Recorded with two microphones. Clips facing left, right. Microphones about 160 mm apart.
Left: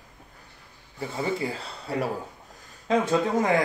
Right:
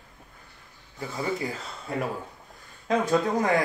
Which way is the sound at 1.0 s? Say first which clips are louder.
Left 2 dB; 25° left (ahead or behind).